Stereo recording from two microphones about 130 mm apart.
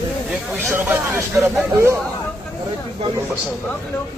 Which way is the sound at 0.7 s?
15° right (ahead or behind).